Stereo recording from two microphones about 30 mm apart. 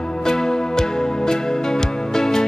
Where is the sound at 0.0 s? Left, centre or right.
Left.